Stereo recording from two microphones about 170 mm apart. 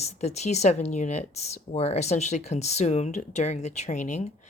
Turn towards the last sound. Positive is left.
turn(degrees=45)  # may be behind; listen again after turning